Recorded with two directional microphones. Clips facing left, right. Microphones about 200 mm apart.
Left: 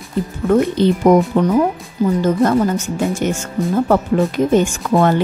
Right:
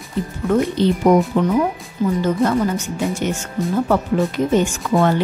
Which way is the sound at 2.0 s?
35° left (ahead or behind).